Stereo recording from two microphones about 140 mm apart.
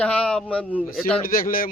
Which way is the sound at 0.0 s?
10° left (ahead or behind).